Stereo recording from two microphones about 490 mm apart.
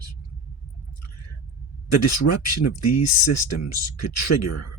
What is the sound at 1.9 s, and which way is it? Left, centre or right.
Speech, left.